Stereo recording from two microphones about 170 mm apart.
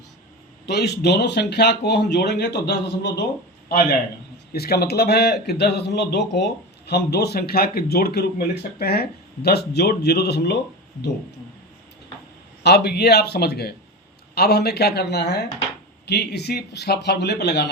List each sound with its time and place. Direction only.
0.6 s speech: 75° left (ahead or behind)
3.7 s a man's voice: 60° left (ahead or behind); by 10.6 s 75° left (ahead or behind)
12.6 s speech: 75° left (ahead or behind)